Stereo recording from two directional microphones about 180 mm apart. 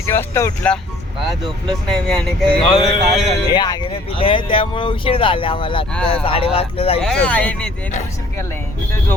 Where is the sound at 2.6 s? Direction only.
30° left (ahead or behind).